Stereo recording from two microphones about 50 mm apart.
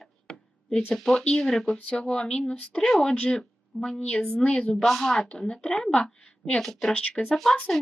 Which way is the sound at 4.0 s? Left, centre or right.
Left.